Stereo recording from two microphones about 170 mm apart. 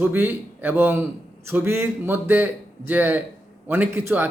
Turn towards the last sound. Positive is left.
turn(degrees=-15)  # may be behind; listen again after turning